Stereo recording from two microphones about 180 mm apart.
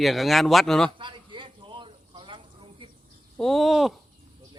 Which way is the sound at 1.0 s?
25° right (ahead or behind).